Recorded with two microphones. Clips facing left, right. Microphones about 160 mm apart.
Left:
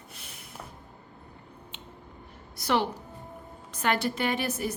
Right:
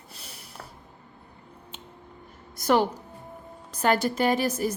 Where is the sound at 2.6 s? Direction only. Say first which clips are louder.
Right 5 dB; 45° right (ahead or behind).